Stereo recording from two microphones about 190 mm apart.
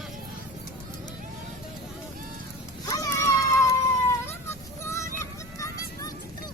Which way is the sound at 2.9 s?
15° left (ahead or behind).